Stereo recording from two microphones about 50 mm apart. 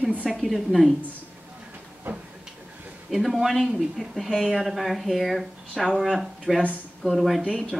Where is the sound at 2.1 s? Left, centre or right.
Right.